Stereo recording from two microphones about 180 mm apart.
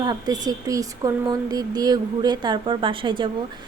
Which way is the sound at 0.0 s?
20° right (ahead or behind).